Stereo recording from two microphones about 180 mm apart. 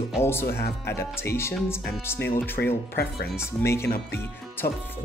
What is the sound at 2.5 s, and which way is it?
Speech, 65° left (ahead or behind).